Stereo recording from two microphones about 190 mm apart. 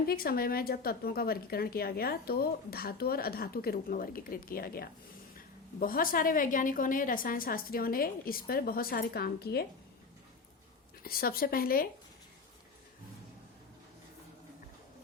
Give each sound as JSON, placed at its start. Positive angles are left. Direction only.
{"t": 0.1, "sound": "a woman's voice", "side_deg": 50}
{"t": 11.0, "sound": "a woman's voice", "side_deg": 50}